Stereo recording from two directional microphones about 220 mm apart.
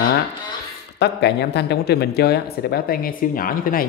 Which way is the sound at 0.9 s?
50° left (ahead or behind).